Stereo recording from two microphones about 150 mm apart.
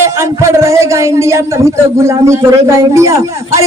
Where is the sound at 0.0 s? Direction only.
20° right (ahead or behind).